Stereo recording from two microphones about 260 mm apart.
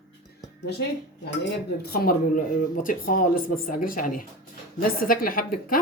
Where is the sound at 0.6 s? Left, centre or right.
Left.